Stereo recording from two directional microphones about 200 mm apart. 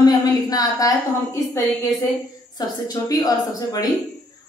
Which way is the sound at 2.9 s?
20° left (ahead or behind).